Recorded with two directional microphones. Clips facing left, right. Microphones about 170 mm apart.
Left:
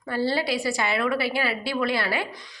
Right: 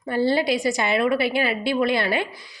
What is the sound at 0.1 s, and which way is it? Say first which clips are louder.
A woman's voice: right 4 dB; 20° right (ahead or behind).